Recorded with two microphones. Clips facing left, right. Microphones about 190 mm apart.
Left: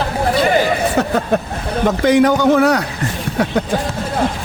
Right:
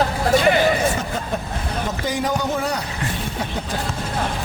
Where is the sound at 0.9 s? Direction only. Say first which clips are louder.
Left 10 dB; 70° left (ahead or behind).